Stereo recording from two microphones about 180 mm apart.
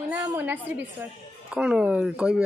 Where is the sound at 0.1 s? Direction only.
10° right (ahead or behind).